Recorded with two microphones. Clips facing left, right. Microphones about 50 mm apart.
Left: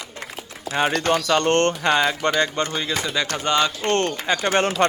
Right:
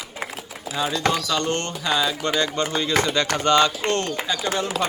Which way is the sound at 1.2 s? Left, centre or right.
Left.